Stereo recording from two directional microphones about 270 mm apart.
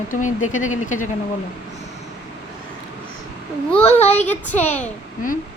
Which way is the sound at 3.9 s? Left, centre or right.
Left.